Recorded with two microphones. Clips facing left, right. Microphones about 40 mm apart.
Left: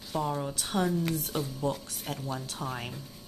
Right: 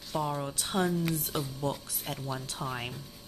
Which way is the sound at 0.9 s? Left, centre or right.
Centre.